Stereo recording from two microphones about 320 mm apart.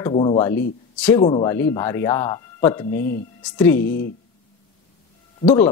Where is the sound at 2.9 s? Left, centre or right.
Left.